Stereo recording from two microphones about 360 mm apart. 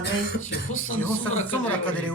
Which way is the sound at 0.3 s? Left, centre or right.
Left.